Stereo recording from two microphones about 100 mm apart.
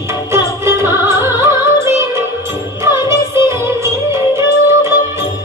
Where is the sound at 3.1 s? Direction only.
25° right (ahead or behind).